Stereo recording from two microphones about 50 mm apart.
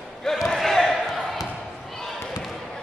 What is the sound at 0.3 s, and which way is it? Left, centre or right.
Speech, centre.